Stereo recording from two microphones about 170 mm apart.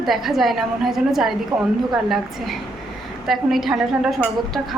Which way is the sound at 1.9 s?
Centre (ahead or behind).